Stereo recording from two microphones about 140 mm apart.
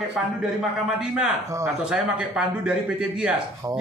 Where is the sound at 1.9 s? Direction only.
5° right (ahead or behind).